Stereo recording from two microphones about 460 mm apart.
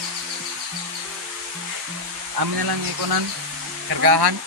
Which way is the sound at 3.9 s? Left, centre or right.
Right.